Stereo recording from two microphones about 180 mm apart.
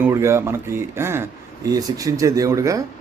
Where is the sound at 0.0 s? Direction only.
15° right (ahead or behind).